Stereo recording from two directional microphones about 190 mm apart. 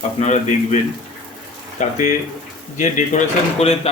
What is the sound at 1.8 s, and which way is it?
A man's voice, 40° left (ahead or behind).